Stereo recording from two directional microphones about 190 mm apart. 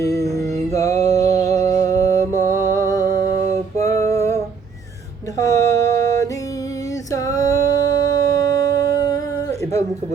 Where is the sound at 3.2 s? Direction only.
40° right (ahead or behind).